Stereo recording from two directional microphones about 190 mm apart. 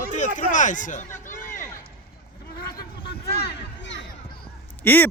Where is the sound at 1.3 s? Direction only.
45° left (ahead or behind).